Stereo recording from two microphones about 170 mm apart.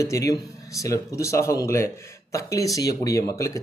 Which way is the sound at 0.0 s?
20° left (ahead or behind).